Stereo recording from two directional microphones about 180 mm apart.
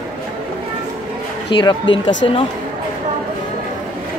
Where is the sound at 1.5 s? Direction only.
25° left (ahead or behind).